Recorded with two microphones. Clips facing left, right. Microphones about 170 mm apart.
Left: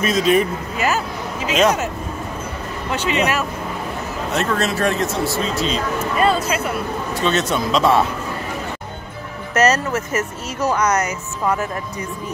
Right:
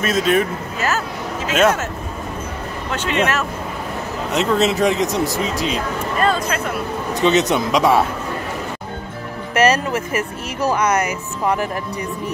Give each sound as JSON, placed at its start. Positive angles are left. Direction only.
{"t": 0.0, "sound": "speech", "side_deg": 0}
{"t": 0.7, "sound": "speech", "side_deg": 10}
{"t": 2.9, "sound": "speech", "side_deg": 10}
{"t": 4.3, "sound": "speech", "side_deg": -20}
{"t": 6.1, "sound": "speech", "side_deg": 5}
{"t": 7.2, "sound": "speech", "side_deg": -20}
{"t": 9.5, "sound": "speech", "side_deg": -15}
{"t": 10.8, "sound": "speech", "side_deg": -30}